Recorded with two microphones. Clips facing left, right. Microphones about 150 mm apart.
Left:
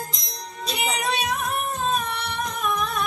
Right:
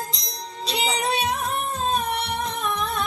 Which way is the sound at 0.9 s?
30° right (ahead or behind).